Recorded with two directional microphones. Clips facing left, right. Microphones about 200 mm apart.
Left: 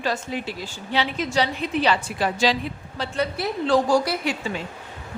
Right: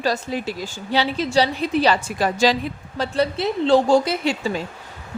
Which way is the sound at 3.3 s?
25° right (ahead or behind).